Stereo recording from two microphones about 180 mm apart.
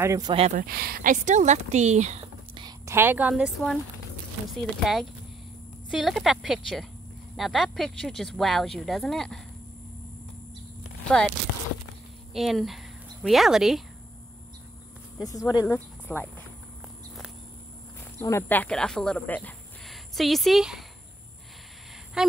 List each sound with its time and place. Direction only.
0.0 s speech: 15° right (ahead or behind)
0.6 s speech: 55° right (ahead or behind); by 2.2 s 40° right (ahead or behind)
2.5 s speech: 20° right (ahead or behind); by 9.4 s 5° left (ahead or behind)
11.1 s speech: 5° left (ahead or behind)
12.4 s speech: centre (ahead or behind)
15.2 s speech: 20° left (ahead or behind)
18.2 s speech: 15° left (ahead or behind)